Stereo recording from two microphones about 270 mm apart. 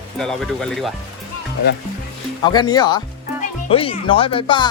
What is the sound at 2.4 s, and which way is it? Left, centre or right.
Speech, centre.